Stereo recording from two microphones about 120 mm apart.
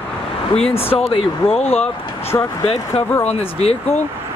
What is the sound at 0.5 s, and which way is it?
Speech, 55° left (ahead or behind).